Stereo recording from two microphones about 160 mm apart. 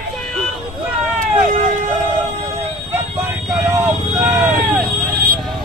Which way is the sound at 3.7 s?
15° right (ahead or behind).